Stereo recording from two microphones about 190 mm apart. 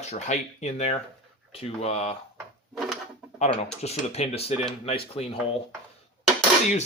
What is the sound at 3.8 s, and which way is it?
Speech, 35° left (ahead or behind).